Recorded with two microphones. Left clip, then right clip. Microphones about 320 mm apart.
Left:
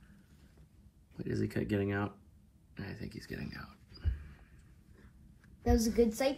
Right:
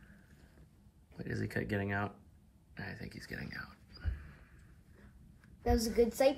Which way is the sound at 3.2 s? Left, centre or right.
Centre.